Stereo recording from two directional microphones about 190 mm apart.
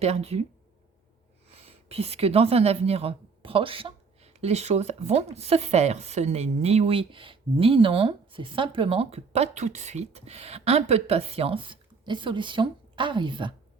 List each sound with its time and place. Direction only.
0.0 s a woman's voice: 35° right (ahead or behind)
1.5 s a woman's voice: 30° right (ahead or behind)